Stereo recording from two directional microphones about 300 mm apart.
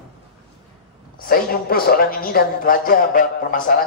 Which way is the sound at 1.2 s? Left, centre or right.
Left.